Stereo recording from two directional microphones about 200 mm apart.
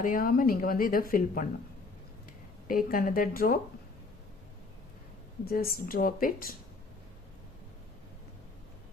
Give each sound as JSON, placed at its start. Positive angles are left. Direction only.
{"t": 0.0, "sound": "speech", "side_deg": 45}
{"t": 2.6, "sound": "speech", "side_deg": 45}
{"t": 5.5, "sound": "speech", "side_deg": 45}